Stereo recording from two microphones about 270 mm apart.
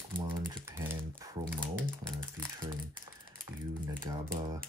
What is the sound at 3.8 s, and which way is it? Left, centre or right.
Speech, centre.